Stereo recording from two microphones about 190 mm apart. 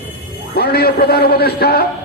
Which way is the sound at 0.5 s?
55° left (ahead or behind).